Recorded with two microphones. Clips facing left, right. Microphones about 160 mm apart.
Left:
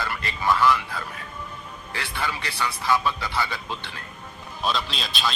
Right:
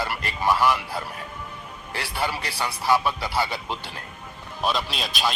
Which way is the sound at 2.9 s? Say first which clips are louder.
Right 2 dB; 10° right (ahead or behind).